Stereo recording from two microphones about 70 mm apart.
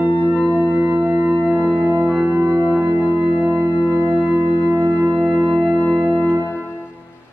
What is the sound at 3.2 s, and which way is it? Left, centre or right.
Organ, centre.